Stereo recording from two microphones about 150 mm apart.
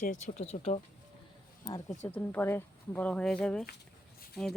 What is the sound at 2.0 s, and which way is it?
Speech, 15° left (ahead or behind).